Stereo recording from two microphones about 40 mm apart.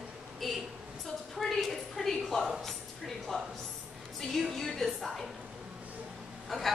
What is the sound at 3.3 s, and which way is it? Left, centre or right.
Speech, left.